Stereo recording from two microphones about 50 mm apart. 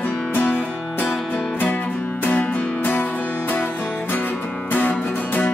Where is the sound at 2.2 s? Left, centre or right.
Left.